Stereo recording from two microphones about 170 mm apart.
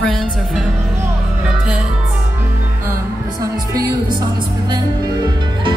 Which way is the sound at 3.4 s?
20° right (ahead or behind).